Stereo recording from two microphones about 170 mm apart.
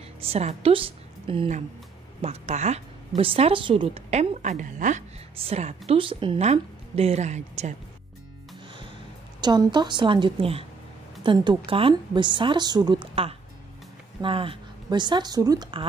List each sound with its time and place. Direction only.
0.2 s a woman's voice: 35° right (ahead or behind)
9.4 s a woman's voice: 25° right (ahead or behind)